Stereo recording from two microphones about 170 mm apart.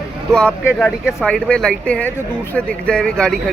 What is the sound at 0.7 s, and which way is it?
A man's voice, 5° left (ahead or behind).